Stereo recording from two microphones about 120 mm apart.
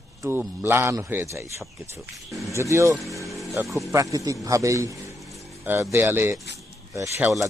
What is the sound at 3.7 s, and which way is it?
Speech, centre (ahead or behind).